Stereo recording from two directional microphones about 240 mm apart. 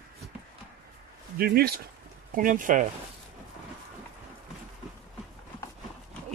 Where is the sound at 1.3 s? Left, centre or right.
Right.